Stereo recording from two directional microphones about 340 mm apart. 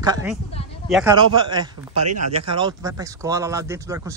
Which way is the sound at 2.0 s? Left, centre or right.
Right.